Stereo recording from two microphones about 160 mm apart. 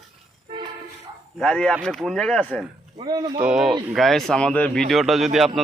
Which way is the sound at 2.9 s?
25° right (ahead or behind).